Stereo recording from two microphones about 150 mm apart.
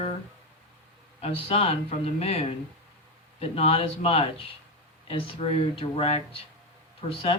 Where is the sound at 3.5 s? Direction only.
40° left (ahead or behind).